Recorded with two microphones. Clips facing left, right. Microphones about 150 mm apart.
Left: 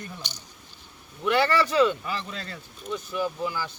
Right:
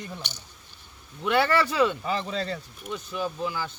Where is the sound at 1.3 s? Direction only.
15° right (ahead or behind).